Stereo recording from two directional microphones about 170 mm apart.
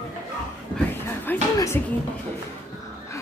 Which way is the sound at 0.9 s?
15° left (ahead or behind).